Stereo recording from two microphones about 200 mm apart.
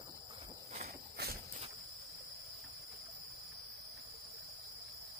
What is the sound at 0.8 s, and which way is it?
Walk, 50° right (ahead or behind).